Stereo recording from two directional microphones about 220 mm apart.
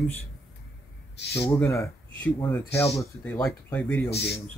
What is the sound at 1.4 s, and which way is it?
Speech, 10° left (ahead or behind).